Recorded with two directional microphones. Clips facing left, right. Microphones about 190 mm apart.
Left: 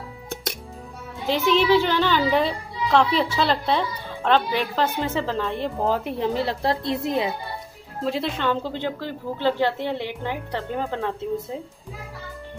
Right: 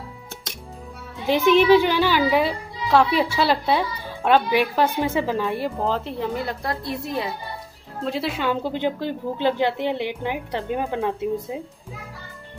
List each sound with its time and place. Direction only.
1.2 s a child's voice: 15° right (ahead or behind)
5.8 s speech: 10° left (ahead or behind)
6.1 s a woman's voice: 25° left (ahead or behind)
8.0 s a child's voice: centre (ahead or behind)